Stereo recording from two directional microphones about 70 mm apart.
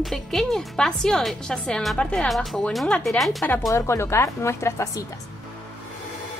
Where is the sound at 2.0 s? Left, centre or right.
Centre.